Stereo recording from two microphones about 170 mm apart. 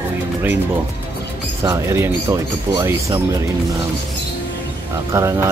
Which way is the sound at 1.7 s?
15° right (ahead or behind).